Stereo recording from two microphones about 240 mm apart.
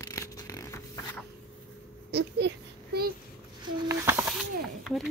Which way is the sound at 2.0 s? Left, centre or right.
Right.